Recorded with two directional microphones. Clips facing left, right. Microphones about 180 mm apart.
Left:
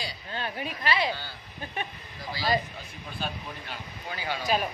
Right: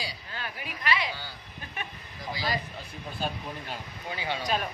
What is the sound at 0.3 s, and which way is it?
Speech, 30° left (ahead or behind).